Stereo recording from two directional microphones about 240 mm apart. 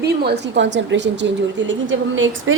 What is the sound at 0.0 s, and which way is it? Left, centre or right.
Speech, right.